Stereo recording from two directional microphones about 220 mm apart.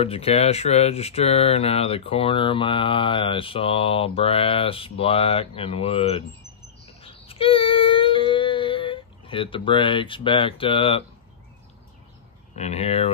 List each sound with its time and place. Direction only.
0.0 s speech: 25° left (ahead or behind)
6.9 s child singing: 25° left (ahead or behind)
12.5 s speech: 30° left (ahead or behind)